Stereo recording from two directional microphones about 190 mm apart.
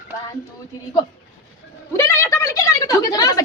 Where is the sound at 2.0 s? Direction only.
15° left (ahead or behind).